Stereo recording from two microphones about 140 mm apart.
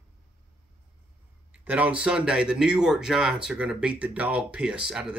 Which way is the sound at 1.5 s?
10° right (ahead or behind).